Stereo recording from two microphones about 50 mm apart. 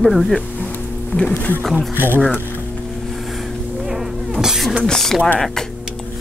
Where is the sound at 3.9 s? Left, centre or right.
Centre.